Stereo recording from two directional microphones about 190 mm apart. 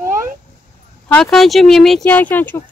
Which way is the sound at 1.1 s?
Centre (ahead or behind).